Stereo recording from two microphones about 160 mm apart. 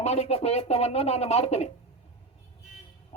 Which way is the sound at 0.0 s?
40° left (ahead or behind).